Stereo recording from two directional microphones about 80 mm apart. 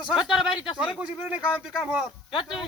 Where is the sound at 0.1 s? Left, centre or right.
Centre.